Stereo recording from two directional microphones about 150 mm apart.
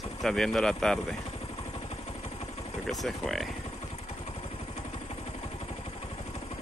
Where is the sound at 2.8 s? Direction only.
Centre (ahead or behind).